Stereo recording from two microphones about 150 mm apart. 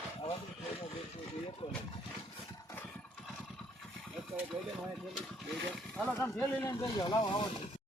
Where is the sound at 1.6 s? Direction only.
35° left (ahead or behind).